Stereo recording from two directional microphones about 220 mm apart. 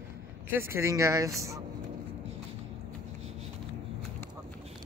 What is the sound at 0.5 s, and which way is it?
Speech, 10° right (ahead or behind).